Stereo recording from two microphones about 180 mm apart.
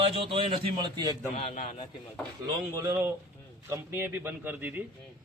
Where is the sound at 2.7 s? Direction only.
15° right (ahead or behind).